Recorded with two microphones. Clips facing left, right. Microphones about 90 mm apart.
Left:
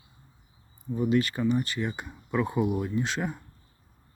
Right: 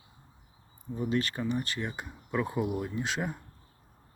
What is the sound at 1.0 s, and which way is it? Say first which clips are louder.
Speech: left 5 dB; 5° left (ahead or behind).